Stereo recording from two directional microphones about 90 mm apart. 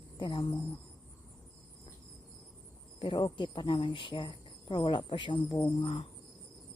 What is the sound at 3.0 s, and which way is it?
Speech, 70° left (ahead or behind).